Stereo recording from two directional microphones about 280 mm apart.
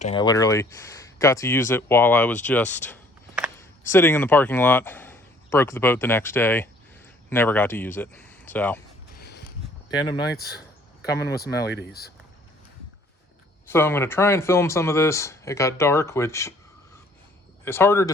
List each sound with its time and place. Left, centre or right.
0.0 s speech: centre
9.1 s a sound: left
10.0 s speech: centre
10.3 s speech: left
13.7 s speech: centre